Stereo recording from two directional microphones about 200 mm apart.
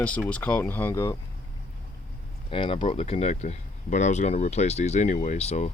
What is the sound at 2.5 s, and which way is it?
Speech, 25° left (ahead or behind).